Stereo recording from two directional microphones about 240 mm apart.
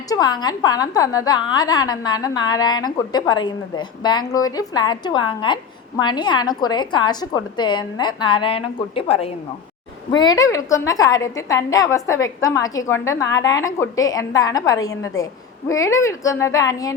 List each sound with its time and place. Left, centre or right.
0.1 s a woman's voice: centre